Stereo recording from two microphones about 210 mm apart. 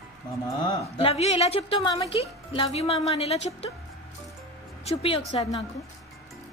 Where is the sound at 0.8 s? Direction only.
30° left (ahead or behind).